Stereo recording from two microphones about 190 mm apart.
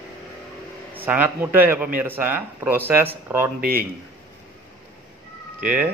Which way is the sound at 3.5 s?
50° right (ahead or behind).